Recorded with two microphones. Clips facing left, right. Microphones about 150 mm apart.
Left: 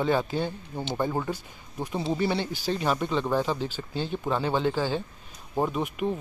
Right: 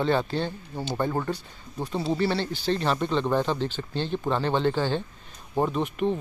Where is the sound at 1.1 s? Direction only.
5° left (ahead or behind).